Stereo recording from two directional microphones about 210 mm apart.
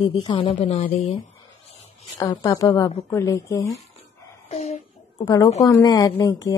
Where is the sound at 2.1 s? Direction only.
20° left (ahead or behind).